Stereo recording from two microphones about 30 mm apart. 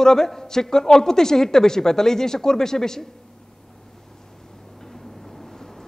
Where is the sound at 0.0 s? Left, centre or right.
Centre.